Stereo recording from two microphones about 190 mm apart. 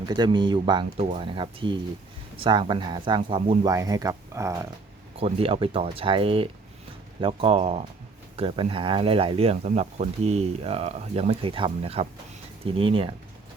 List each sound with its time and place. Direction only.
0.0 s speech: 20° right (ahead or behind)
5.1 s speech: 30° right (ahead or behind)